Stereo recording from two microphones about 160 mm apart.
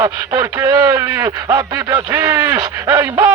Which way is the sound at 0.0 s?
15° right (ahead or behind).